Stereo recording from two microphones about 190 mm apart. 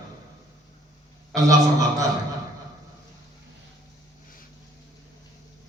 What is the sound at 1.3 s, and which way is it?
Speech, 20° right (ahead or behind).